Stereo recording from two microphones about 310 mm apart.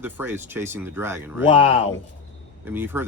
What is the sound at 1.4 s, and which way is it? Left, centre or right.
Speech, centre.